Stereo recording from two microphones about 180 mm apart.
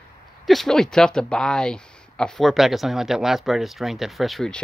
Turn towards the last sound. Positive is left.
turn(degrees=0)  # may be behind; listen again after turning